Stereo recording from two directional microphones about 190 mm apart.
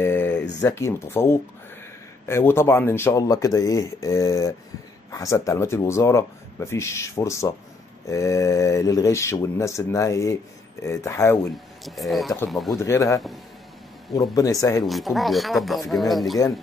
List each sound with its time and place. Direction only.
0.0 s a sound: 10° left (ahead or behind)
0.6 s speech: 15° left (ahead or behind)
11.8 s speech: centre (ahead or behind)
12.7 s speech: 15° left (ahead or behind)
14.9 s speech: centre (ahead or behind)